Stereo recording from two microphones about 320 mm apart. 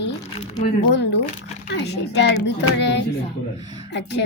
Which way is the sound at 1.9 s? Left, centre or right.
Left.